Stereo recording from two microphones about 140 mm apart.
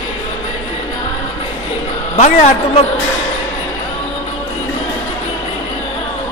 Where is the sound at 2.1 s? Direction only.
50° left (ahead or behind).